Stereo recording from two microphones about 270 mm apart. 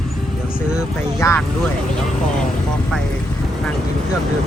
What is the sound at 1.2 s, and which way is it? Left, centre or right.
Vehicle, centre.